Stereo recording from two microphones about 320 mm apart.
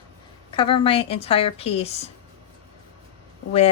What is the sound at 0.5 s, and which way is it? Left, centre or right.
Speech, centre.